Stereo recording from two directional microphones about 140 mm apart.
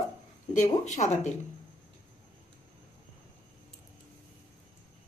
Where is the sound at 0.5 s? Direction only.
60° left (ahead or behind).